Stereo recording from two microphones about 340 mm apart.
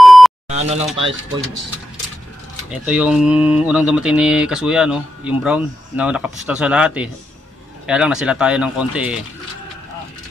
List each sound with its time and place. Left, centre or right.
0.0 s beep: centre
0.5 s speech: centre
2.7 s speech: centre